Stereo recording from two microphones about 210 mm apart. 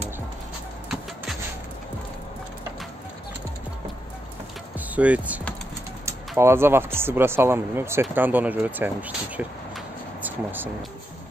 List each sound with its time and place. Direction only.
4.7 s speech: 5° right (ahead or behind)